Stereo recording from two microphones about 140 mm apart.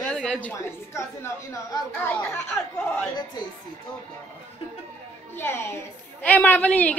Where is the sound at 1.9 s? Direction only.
10° left (ahead or behind).